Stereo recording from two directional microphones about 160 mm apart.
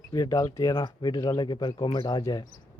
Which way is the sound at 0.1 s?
25° left (ahead or behind).